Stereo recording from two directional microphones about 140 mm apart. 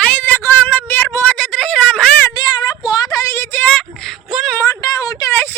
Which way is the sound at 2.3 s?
30° left (ahead or behind).